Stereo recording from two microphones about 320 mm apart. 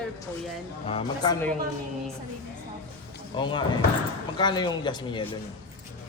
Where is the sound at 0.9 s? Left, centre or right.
Centre.